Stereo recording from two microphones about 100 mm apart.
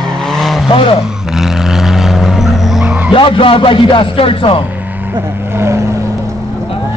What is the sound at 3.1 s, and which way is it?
Speech, 60° left (ahead or behind).